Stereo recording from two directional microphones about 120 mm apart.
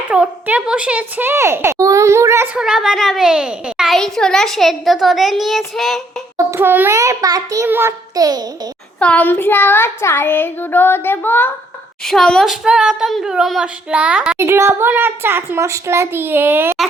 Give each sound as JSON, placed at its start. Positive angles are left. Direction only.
{"t": 0.1, "sound": "a child's voice", "side_deg": -10}
{"t": 2.6, "sound": "a child's voice", "side_deg": -5}
{"t": 6.3, "sound": "a child's voice", "side_deg": -20}
{"t": 7.0, "sound": "a child's voice", "side_deg": -30}
{"t": 7.7, "sound": "a child's voice", "side_deg": -20}
{"t": 8.1, "sound": "a child's voice", "side_deg": -35}
{"t": 9.0, "sound": "child singing", "side_deg": 10}
{"t": 12.0, "sound": "a child's voice", "side_deg": 5}
{"t": 14.3, "sound": "a child's voice", "side_deg": -20}